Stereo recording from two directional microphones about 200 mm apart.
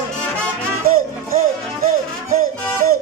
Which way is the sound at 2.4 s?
45° right (ahead or behind).